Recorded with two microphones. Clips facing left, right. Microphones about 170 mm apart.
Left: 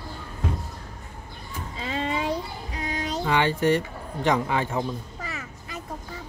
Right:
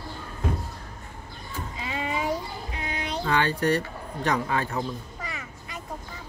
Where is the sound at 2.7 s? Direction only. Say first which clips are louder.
Left 3 dB; 40° left (ahead or behind).